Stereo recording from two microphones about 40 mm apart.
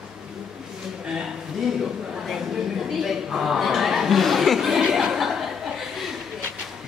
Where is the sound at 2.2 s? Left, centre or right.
Centre.